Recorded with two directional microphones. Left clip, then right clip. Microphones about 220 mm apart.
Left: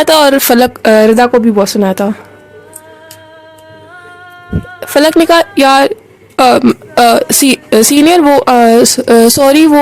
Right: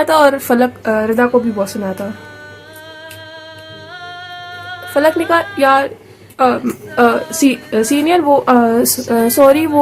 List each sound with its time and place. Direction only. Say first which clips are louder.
0.0 s a woman's voice: left 4 dB; 45° left (ahead or behind)
4.9 s a woman's voice: left 6 dB; 50° left (ahead or behind)